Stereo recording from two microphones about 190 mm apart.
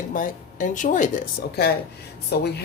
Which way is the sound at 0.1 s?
45° left (ahead or behind).